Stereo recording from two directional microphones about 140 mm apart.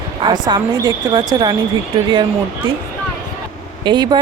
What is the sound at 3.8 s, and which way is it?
Speech, 35° right (ahead or behind).